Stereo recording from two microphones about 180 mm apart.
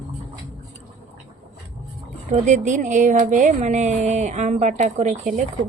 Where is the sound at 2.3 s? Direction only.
40° right (ahead or behind).